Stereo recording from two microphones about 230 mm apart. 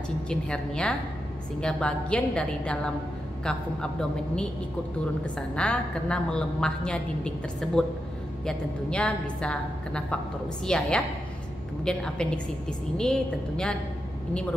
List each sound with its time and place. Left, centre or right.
0.3 s a woman's voice: centre
5.2 s a woman's voice: centre